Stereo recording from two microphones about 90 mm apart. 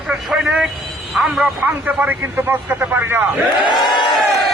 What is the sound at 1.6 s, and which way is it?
Speech, 20° right (ahead or behind).